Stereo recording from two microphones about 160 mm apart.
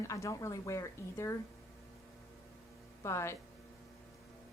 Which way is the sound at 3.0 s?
15° left (ahead or behind).